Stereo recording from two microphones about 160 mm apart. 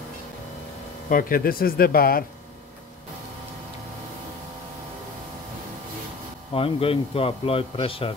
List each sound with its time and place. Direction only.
1.0 s speech: 65° left (ahead or behind)
6.5 s a man's voice: 35° left (ahead or behind)